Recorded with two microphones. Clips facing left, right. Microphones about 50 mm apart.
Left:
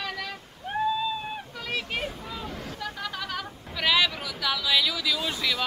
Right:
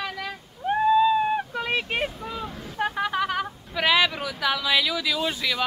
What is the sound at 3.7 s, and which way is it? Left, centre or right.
Speech, centre.